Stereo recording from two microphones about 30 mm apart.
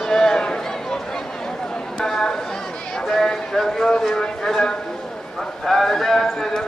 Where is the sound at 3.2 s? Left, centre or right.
Centre.